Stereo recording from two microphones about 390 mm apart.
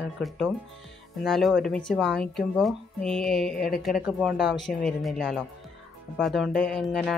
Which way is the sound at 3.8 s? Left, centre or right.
Centre.